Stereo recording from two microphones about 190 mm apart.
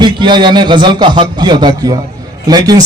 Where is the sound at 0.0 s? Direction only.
25° right (ahead or behind).